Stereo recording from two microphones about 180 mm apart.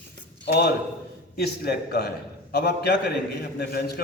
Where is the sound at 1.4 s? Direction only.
60° left (ahead or behind).